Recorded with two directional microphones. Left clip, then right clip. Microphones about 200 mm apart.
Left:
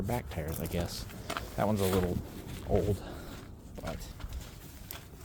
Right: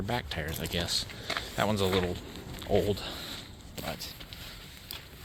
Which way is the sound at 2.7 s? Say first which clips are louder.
Right 3 dB; centre (ahead or behind).